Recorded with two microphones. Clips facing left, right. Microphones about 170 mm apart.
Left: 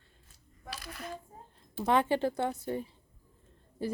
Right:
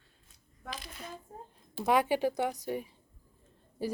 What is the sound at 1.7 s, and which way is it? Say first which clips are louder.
A woman's voice: even; 10° right (ahead or behind).